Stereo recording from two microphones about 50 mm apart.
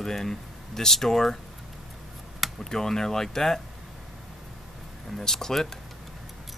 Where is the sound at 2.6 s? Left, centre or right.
Centre.